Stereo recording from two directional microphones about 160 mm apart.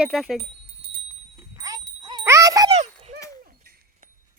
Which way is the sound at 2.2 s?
20° right (ahead or behind).